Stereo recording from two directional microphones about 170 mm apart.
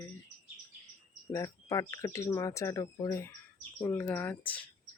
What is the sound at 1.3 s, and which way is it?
Speech, 20° left (ahead or behind).